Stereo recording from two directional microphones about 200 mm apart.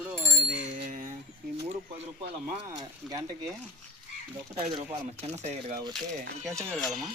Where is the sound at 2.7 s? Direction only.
20° right (ahead or behind).